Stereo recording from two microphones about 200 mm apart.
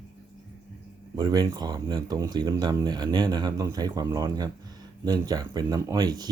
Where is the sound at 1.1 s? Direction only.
20° right (ahead or behind).